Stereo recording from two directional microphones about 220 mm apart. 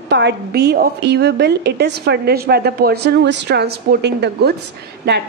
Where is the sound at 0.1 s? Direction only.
50° right (ahead or behind).